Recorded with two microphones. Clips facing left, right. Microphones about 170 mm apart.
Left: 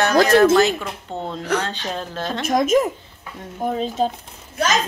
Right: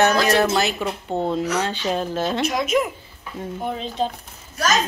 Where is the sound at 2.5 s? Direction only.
45° left (ahead or behind).